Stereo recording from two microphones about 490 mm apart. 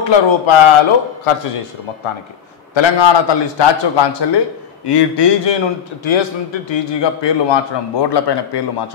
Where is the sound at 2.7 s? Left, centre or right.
Left.